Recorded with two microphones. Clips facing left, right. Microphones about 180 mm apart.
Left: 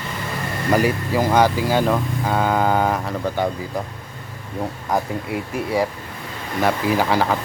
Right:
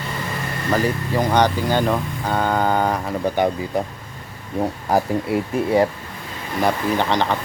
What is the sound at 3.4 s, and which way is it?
Speech, 15° right (ahead or behind).